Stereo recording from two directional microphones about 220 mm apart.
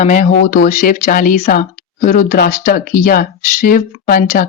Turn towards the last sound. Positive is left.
turn(degrees=40)  # may be behind; listen again after turning